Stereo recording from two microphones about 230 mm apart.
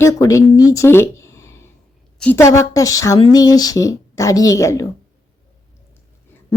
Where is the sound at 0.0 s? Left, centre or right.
Centre.